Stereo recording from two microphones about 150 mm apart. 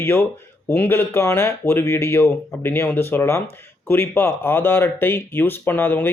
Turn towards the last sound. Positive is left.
turn(degrees=15)  # may be behind; listen again after turning